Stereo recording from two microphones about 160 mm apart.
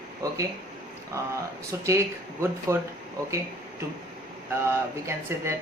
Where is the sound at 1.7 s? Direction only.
15° right (ahead or behind).